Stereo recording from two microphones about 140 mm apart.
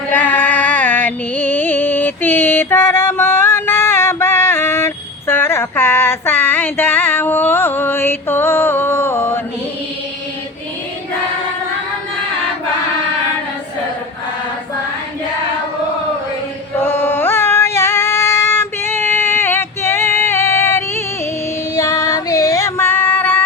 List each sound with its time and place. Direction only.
0.1 s music: 15° left (ahead or behind)
16.8 s singing: 15° left (ahead or behind)
21.8 s female singing: 25° left (ahead or behind)